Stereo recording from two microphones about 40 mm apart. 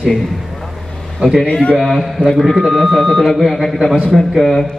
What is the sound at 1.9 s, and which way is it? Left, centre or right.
Speech, centre.